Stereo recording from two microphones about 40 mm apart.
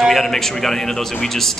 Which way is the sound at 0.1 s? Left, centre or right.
Centre.